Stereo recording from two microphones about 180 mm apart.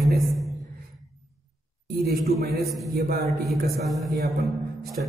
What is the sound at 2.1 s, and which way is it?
Speech, 60° right (ahead or behind).